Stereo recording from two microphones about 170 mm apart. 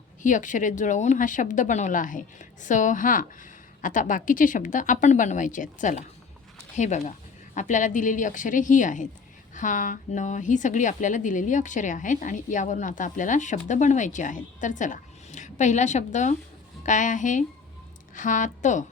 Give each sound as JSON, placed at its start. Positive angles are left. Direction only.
{"t": 0.2, "sound": "a woman's voice", "side_deg": 50}